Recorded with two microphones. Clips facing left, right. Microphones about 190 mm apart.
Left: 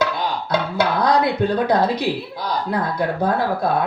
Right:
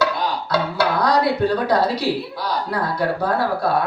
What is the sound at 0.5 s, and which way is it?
Speech, 20° left (ahead or behind).